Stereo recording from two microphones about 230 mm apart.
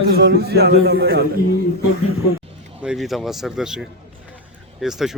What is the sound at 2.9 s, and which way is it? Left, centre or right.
Speech, centre.